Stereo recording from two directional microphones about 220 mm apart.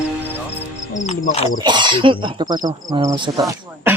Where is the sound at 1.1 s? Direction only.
30° left (ahead or behind).